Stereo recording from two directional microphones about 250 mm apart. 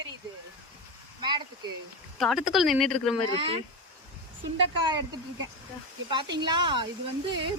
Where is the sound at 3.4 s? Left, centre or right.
Right.